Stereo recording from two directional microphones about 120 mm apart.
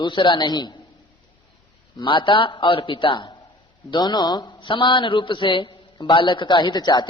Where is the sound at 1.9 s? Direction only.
45° left (ahead or behind).